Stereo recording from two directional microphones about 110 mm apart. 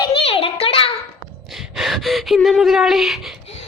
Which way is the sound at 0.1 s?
60° left (ahead or behind).